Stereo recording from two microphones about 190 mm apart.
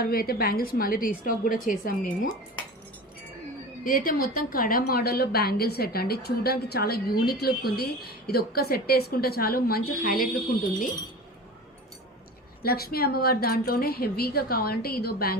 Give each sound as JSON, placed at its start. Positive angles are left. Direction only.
{"t": 0.0, "sound": "a woman's voice", "side_deg": 50}
{"t": 3.8, "sound": "a woman's voice", "side_deg": 50}
{"t": 12.6, "sound": "a woman's voice", "side_deg": 55}